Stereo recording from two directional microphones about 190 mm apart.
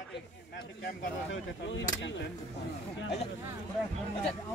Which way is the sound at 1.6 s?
70° left (ahead or behind).